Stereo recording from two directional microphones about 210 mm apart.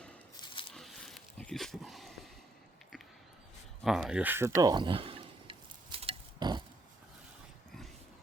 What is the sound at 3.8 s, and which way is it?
Speech, centre (ahead or behind).